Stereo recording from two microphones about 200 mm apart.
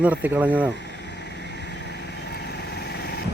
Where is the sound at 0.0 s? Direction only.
10° right (ahead or behind).